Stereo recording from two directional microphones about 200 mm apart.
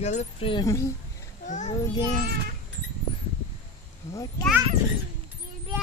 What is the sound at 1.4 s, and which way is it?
Speech, 40° left (ahead or behind).